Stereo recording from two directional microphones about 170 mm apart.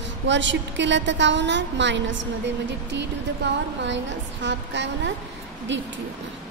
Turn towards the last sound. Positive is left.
turn(degrees=-90)